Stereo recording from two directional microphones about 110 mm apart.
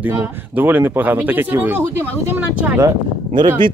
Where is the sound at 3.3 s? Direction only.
50° right (ahead or behind).